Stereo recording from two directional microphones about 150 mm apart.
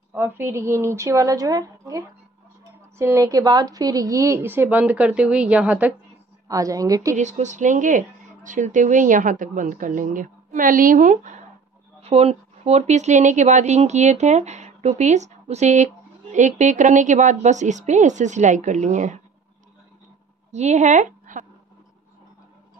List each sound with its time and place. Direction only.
0.1 s a woman's voice: 15° right (ahead or behind)
6.4 s a woman's voice: 20° right (ahead or behind)
7.2 s a woman's voice: 55° right (ahead or behind)
12.0 s a woman's voice: 45° right (ahead or behind)
20.5 s speech: 50° right (ahead or behind)